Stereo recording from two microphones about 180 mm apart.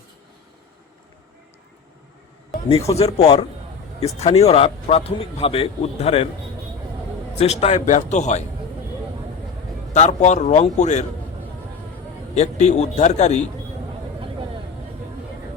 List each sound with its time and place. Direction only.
2.8 s speech: 35° left (ahead or behind)
7.3 s speech: 35° left (ahead or behind)
9.9 s speech: 40° left (ahead or behind)
12.3 s speech: 40° left (ahead or behind)